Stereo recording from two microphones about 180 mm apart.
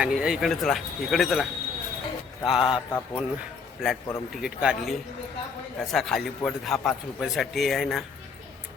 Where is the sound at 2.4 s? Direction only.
30° left (ahead or behind).